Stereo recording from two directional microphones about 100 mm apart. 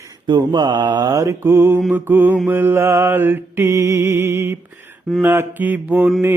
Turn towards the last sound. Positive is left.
turn(degrees=-15)  # may be behind; listen again after turning